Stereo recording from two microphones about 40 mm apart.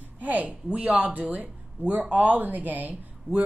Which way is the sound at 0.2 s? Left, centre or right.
Right.